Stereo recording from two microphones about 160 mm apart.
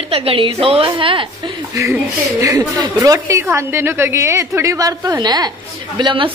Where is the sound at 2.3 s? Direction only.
20° right (ahead or behind).